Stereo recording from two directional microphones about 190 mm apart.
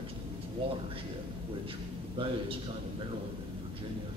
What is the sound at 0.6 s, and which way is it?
Speech, 30° right (ahead or behind).